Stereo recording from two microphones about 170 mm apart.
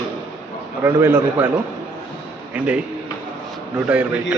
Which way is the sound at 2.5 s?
10° right (ahead or behind).